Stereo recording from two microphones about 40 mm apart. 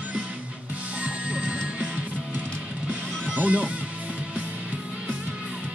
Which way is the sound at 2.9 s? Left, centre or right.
Right.